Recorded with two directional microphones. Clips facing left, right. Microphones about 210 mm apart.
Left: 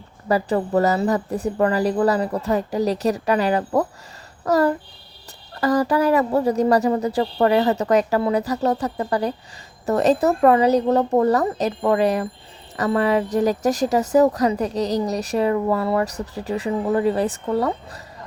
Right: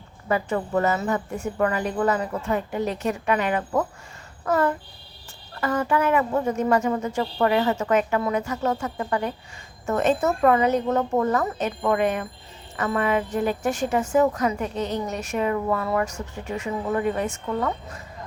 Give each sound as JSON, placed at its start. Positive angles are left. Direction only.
{"t": 0.3, "sound": "a woman's voice", "side_deg": 35}